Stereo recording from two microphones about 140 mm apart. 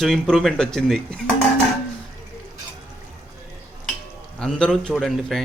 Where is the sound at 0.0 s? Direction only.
Centre (ahead or behind).